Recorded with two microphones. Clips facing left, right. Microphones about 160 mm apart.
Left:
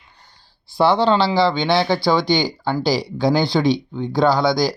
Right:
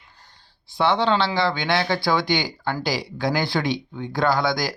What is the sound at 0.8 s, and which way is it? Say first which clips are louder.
Speech: left 4 dB; 35° left (ahead or behind).